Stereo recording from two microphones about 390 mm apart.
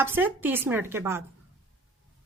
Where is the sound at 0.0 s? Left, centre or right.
Centre.